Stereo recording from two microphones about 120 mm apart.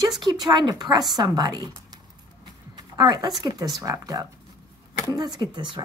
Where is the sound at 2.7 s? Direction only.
35° right (ahead or behind).